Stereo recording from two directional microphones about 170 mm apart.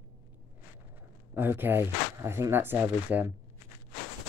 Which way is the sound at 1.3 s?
10° right (ahead or behind).